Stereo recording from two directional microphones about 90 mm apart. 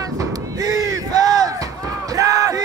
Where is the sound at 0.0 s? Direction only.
40° right (ahead or behind).